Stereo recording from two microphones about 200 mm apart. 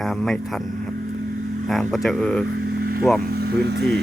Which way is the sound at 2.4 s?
55° right (ahead or behind).